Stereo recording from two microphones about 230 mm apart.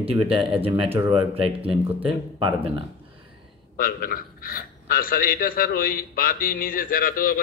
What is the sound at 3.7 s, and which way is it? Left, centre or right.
A man's voice, left.